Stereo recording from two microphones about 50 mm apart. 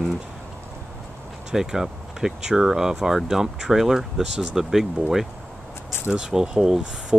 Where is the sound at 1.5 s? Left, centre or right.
Centre.